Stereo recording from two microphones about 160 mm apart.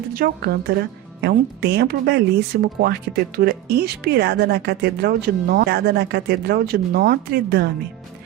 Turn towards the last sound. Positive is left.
turn(degrees=-85)